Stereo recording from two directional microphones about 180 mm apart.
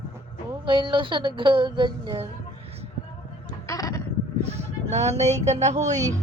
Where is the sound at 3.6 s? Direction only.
15° left (ahead or behind).